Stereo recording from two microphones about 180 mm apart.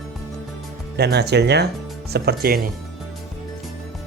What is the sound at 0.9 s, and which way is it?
Speech, 65° right (ahead or behind).